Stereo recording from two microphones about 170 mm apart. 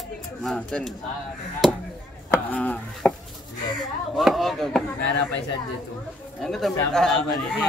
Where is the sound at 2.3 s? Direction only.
10° left (ahead or behind).